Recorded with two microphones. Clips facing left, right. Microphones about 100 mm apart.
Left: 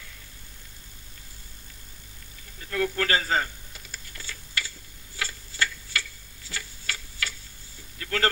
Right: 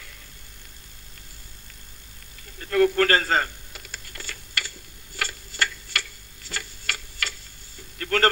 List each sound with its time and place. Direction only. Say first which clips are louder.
2.6 s typing: right 8 dB; 55° right (ahead or behind)
6.5 s tick-tock: right 3 dB; 65° right (ahead or behind)
8.0 s a sound: right 5 dB; 55° right (ahead or behind)